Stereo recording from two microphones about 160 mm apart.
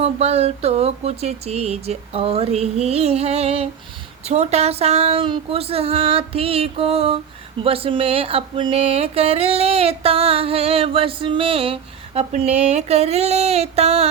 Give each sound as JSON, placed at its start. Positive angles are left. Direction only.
{"t": 0.0, "sound": "speech", "side_deg": -40}